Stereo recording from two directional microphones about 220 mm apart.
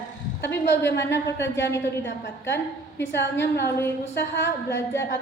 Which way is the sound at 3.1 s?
50° left (ahead or behind).